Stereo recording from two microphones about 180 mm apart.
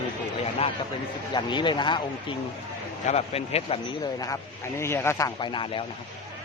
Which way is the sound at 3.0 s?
35° left (ahead or behind).